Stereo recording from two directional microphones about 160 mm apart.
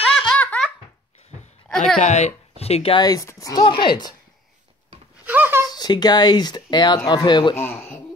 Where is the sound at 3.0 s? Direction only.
20° left (ahead or behind).